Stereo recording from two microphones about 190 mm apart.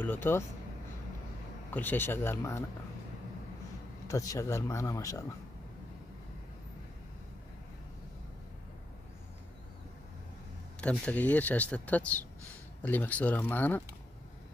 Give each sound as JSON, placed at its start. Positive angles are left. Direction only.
{"t": 0.0, "sound": "speech", "side_deg": 10}
{"t": 1.7, "sound": "speech", "side_deg": 10}
{"t": 4.1, "sound": "speech", "side_deg": 15}
{"t": 10.8, "sound": "speech", "side_deg": 5}